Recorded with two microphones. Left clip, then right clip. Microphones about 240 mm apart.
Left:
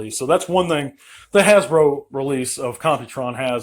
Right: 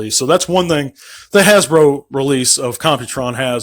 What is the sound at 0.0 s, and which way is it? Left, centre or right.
Speech, right.